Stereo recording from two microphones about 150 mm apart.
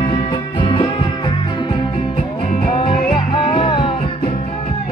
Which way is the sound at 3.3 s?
35° left (ahead or behind).